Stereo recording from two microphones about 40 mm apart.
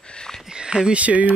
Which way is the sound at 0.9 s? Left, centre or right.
Right.